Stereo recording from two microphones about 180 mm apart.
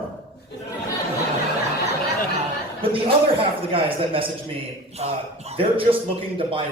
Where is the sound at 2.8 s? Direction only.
30° right (ahead or behind).